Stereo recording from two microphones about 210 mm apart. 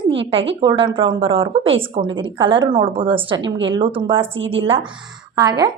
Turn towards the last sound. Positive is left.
turn(degrees=-20)  # may be behind; listen again after turning